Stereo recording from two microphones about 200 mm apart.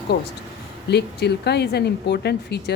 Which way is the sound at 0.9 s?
55° left (ahead or behind).